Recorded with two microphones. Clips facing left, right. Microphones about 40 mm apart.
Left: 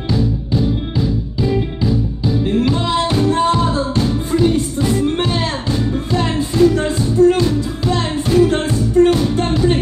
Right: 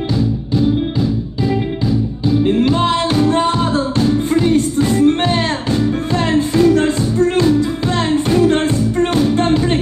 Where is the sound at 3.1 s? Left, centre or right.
Right.